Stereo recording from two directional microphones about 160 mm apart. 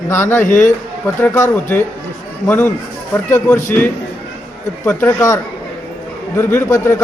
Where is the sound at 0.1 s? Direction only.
15° left (ahead or behind).